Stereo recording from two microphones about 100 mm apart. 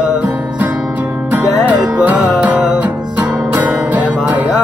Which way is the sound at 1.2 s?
15° right (ahead or behind).